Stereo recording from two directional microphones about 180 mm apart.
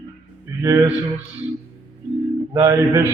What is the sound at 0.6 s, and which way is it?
Speech, 25° right (ahead or behind).